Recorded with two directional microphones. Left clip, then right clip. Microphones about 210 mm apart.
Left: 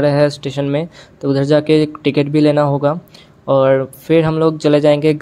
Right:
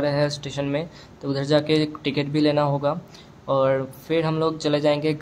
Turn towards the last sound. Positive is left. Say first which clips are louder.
# left 9 dB
turn(degrees=30)  # may be behind; listen again after turning